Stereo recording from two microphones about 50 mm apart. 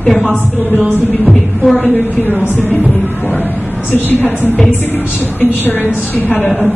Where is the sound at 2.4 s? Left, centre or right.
Left.